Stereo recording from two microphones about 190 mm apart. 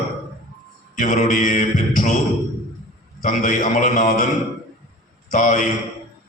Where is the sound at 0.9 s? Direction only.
45° left (ahead or behind).